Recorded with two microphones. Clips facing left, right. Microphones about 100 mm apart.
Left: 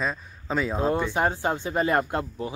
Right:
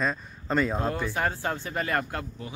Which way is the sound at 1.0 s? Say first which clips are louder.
Left 4 dB; 20° left (ahead or behind).